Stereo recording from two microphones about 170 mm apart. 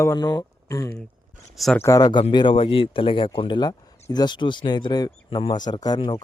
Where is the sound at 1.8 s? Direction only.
20° left (ahead or behind).